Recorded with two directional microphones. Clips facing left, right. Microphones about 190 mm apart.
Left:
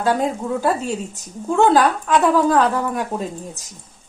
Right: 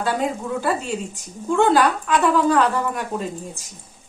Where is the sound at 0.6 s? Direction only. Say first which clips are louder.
Left 3 dB; 45° left (ahead or behind).